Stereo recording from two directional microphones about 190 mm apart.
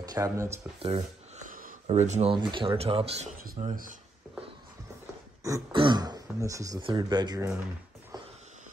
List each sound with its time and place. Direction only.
0.0 s speech: 20° right (ahead or behind)
0.8 s a sound: 30° right (ahead or behind)
1.5 s speech: 45° right (ahead or behind)
3.3 s speech: 45° right (ahead or behind)
5.4 s speech: 20° right (ahead or behind)